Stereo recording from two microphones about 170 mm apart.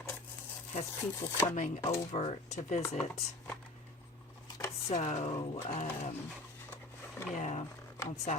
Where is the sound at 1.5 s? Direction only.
45° left (ahead or behind).